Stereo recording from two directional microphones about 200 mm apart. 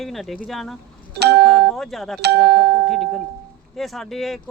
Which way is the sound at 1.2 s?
55° right (ahead or behind).